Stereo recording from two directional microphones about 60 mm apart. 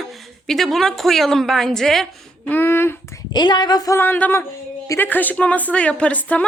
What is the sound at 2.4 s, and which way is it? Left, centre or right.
Speech, left.